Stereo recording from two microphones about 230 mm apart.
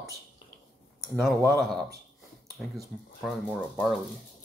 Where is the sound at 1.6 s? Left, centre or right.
Centre.